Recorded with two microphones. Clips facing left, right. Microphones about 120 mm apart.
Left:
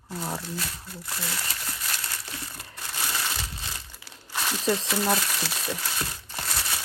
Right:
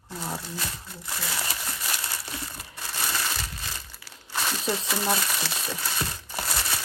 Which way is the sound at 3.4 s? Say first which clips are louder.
Even; 15° left (ahead or behind).